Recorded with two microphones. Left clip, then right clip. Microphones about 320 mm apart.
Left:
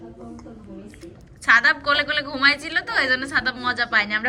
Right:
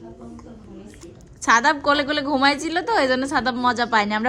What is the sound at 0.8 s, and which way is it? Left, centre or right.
A woman's voice, centre.